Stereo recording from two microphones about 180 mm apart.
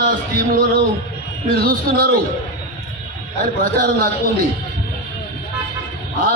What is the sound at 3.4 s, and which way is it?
Speech, 55° right (ahead or behind).